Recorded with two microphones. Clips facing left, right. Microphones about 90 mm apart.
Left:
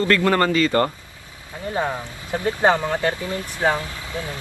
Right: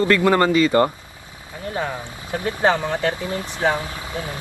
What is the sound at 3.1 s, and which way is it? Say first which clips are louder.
Speech: right 1 dB; 20° right (ahead or behind).